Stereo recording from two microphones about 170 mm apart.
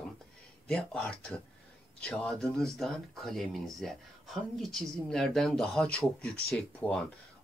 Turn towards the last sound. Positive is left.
turn(degrees=5)  # may be behind; listen again after turning